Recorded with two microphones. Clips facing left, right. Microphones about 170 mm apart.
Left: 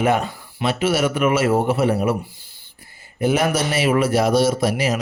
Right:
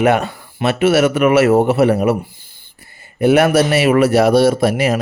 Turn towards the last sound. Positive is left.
turn(degrees=-60)  # may be behind; listen again after turning